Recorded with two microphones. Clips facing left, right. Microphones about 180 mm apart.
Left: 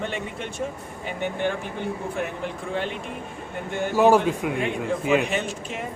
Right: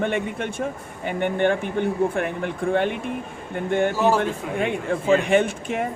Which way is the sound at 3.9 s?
15° left (ahead or behind).